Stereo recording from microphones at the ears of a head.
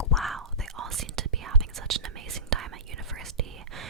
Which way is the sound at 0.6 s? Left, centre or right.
Right.